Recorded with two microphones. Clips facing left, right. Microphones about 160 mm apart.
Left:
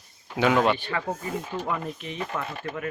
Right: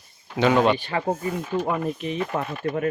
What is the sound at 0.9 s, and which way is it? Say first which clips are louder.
Speech: right 4 dB; 30° right (ahead or behind).